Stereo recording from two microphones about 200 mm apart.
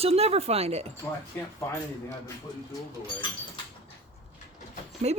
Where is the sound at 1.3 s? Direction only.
10° left (ahead or behind).